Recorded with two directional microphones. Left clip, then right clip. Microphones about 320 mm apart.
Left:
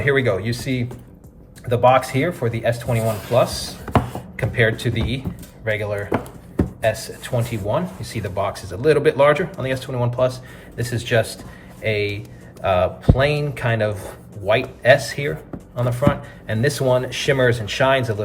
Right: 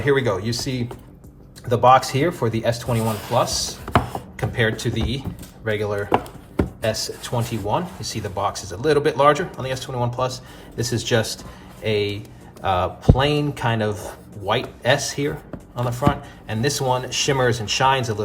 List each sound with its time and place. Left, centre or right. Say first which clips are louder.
0.0 s speech: left 1 dB; centre
7.7 s speech: left 1 dB; centre